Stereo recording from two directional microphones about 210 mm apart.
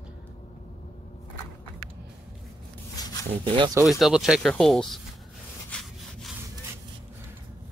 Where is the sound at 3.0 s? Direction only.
20° left (ahead or behind).